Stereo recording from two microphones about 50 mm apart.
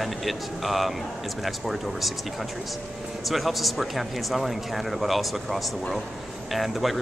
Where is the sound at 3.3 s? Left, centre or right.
Centre.